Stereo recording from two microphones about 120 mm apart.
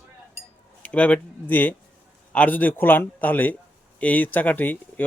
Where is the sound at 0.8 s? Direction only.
10° left (ahead or behind).